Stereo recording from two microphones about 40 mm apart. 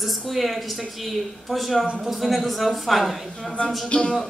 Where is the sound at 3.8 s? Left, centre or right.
Left.